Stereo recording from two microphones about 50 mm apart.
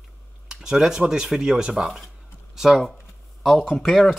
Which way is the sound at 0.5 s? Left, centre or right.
Centre.